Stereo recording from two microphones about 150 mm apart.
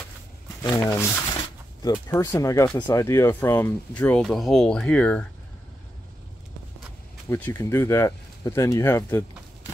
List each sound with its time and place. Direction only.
0.8 s speech: 15° left (ahead or behind)
7.2 s speech: 15° left (ahead or behind)